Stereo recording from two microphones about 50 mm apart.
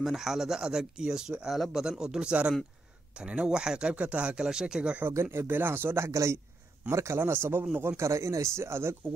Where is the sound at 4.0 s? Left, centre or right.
Right.